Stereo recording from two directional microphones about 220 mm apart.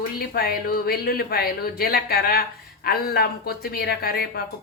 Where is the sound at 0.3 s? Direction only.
45° left (ahead or behind).